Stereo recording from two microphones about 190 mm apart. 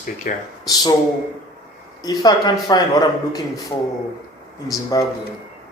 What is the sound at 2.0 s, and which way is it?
Mantra, 20° left (ahead or behind).